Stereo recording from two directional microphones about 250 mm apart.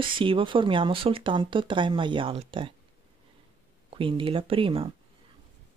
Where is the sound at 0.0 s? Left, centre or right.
Right.